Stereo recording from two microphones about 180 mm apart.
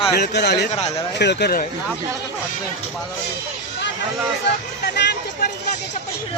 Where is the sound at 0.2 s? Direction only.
65° left (ahead or behind).